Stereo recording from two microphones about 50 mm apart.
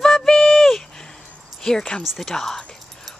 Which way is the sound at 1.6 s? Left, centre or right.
Centre.